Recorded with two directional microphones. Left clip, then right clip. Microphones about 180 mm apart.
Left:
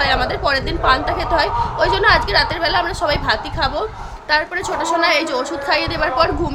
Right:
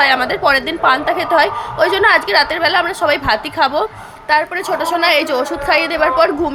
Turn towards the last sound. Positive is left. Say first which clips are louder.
# right 4 dB
turn(degrees=-15)  # may be behind; listen again after turning